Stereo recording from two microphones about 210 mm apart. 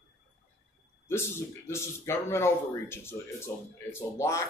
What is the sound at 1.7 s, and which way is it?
Speech, 10° left (ahead or behind).